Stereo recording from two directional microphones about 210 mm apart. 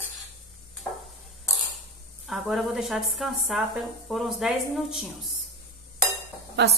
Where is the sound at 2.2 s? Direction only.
Centre (ahead or behind).